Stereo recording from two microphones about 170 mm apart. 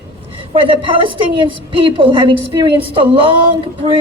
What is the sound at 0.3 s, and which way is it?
A woman's voice, 30° right (ahead or behind).